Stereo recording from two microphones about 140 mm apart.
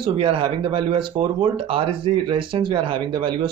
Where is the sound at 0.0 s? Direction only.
40° right (ahead or behind).